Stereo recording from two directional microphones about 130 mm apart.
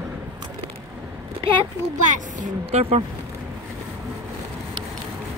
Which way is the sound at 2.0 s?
75° right (ahead or behind).